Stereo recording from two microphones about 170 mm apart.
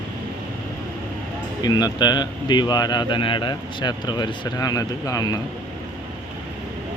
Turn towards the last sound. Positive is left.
turn(degrees=20)  # may be behind; listen again after turning